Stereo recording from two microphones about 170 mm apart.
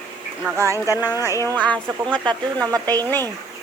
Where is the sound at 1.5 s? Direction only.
10° left (ahead or behind).